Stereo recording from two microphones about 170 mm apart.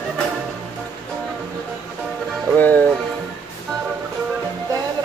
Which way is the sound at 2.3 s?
5° left (ahead or behind).